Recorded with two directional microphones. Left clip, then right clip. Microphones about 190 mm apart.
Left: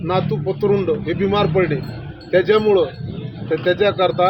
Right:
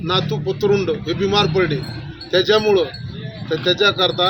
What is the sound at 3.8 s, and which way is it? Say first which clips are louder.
Speech: right 1 dB; centre (ahead or behind).